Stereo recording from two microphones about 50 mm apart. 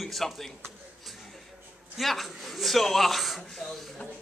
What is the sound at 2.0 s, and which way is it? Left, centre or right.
A man's voice, centre.